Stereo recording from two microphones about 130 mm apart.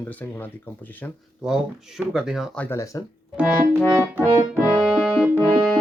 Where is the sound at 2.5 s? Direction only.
10° left (ahead or behind).